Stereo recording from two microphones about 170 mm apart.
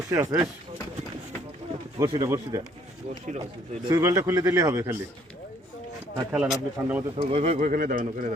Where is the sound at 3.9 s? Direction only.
20° right (ahead or behind).